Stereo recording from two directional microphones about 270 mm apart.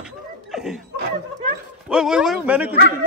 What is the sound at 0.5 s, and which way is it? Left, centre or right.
Laughter, centre.